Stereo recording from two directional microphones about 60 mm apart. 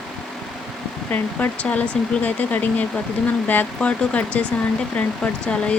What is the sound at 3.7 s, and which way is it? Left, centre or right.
Speech, centre.